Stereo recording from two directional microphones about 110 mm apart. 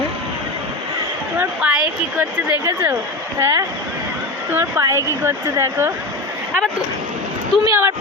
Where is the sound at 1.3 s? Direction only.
15° right (ahead or behind).